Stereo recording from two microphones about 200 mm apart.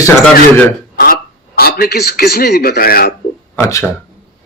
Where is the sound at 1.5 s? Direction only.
50° left (ahead or behind).